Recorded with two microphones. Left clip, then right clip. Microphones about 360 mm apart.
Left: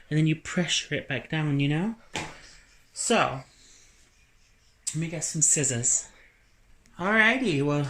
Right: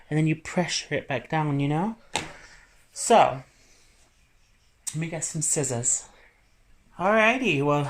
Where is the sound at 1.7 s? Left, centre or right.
Right.